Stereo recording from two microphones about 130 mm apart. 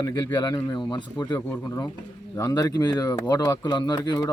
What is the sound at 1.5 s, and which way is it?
Speech, 25° left (ahead or behind).